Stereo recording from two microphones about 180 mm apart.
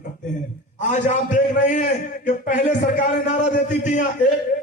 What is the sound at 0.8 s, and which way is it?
A man's voice, 45° left (ahead or behind).